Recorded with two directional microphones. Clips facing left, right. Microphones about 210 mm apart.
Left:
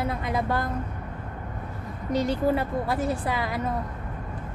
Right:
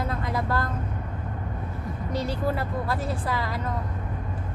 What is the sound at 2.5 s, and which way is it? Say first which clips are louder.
Speech: left 3 dB; 15° left (ahead or behind).